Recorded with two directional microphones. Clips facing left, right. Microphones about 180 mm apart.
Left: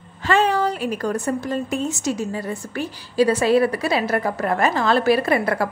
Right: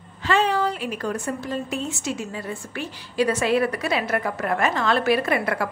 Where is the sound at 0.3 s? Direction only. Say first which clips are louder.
Left 3 dB; 45° left (ahead or behind).